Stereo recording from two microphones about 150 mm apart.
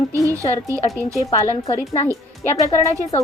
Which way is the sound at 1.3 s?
20° left (ahead or behind).